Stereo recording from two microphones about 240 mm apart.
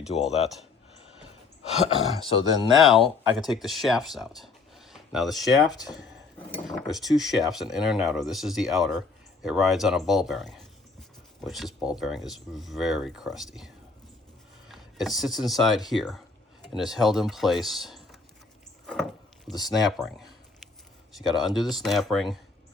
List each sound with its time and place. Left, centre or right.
2.4 s speech: centre
2.7 s speech: centre
18.9 s a sound: centre
19.6 s speech: centre